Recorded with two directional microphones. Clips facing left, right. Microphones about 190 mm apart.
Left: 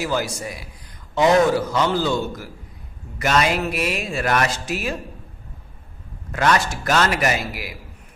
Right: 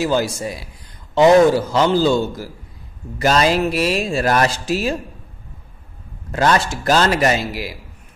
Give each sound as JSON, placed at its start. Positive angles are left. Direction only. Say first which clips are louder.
{"t": 0.0, "sound": "a man's voice", "louder": "right 5 dB", "side_deg": -30}
{"t": 6.3, "sound": "a man's voice", "louder": "right 3 dB", "side_deg": -30}